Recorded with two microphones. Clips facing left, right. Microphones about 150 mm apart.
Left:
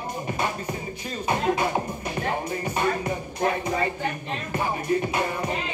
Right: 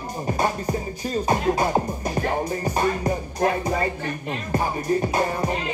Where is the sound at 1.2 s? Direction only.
35° right (ahead or behind).